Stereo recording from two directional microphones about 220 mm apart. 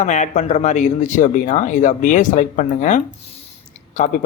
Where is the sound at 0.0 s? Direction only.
30° left (ahead or behind).